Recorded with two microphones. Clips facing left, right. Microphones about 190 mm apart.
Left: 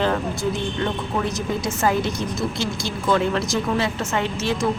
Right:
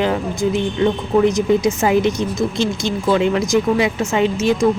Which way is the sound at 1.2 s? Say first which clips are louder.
Right 10 dB; 15° right (ahead or behind).